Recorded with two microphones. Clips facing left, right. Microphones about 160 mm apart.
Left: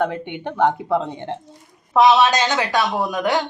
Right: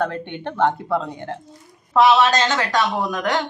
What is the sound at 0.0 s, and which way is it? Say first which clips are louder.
A woman's voice: left 2 dB; 15° left (ahead or behind).